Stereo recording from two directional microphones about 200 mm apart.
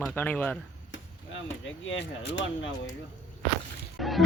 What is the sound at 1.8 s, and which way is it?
Speech, 65° left (ahead or behind).